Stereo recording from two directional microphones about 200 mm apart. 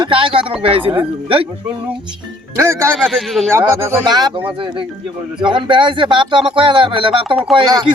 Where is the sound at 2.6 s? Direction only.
15° right (ahead or behind).